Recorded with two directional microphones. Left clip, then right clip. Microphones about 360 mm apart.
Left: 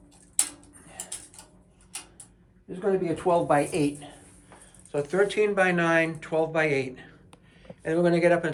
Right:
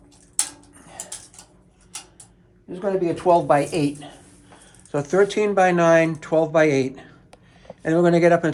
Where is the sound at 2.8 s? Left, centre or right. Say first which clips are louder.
Right 4 dB; right.